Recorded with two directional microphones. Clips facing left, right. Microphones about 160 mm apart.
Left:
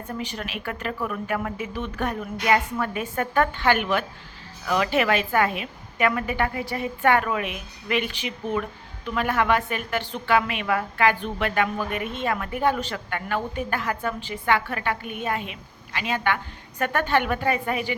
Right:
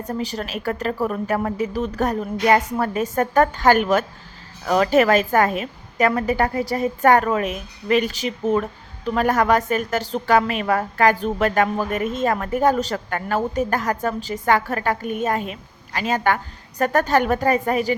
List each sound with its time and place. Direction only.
0.0 s a woman's voice: 40° right (ahead or behind)